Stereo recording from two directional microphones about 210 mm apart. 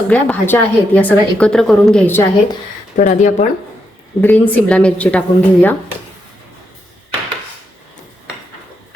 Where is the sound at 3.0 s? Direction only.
35° left (ahead or behind).